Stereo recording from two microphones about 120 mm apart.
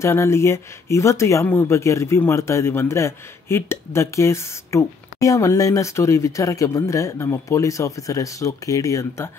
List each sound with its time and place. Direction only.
0.0 s speech: 20° left (ahead or behind)